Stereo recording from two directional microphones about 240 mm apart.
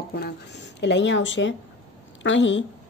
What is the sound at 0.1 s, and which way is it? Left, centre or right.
Speech, left.